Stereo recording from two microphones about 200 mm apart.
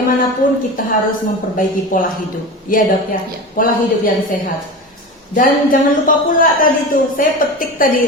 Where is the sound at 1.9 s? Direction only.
45° left (ahead or behind).